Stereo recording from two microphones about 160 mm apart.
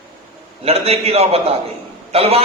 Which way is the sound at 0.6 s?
40° right (ahead or behind).